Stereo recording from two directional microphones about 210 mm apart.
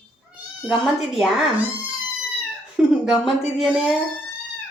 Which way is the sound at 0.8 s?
Centre (ahead or behind).